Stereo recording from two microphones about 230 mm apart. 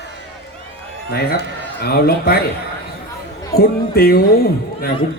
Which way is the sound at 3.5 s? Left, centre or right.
Left.